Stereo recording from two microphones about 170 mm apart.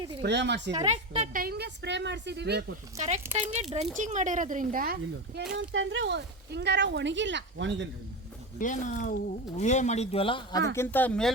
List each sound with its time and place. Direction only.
0.2 s speech: 90° right
0.9 s a woman's voice: 40° right (ahead or behind)
1.4 s a woman's voice: 70° right (ahead or behind)
3.5 s a woman's voice: 40° right (ahead or behind)
5.5 s speech: 90° right
8.5 s speech: 50° left (ahead or behind); by 10.6 s 30° left (ahead or behind)
10.8 s speech: 10° left (ahead or behind)